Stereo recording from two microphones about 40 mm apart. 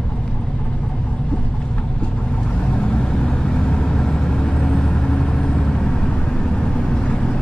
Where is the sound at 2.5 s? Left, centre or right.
Left.